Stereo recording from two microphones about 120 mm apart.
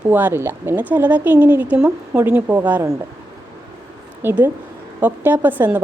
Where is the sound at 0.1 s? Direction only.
15° right (ahead or behind).